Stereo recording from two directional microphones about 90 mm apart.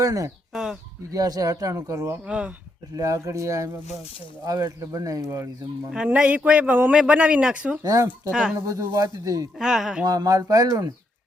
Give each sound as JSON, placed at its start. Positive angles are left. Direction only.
{"t": 0.0, "sound": "speech", "side_deg": -40}
{"t": 0.5, "sound": "speech", "side_deg": -5}
{"t": 1.1, "sound": "a man's voice", "side_deg": -45}
{"t": 2.2, "sound": "speech", "side_deg": -10}
{"t": 2.9, "sound": "a man's voice", "side_deg": -35}
{"t": 5.9, "sound": "speech", "side_deg": -10}
{"t": 7.8, "sound": "a man's voice", "side_deg": -40}
{"t": 8.3, "sound": "speech", "side_deg": -10}
{"t": 8.5, "sound": "a man's voice", "side_deg": -35}
{"t": 9.6, "sound": "speech", "side_deg": -5}
{"t": 10.0, "sound": "speech", "side_deg": -45}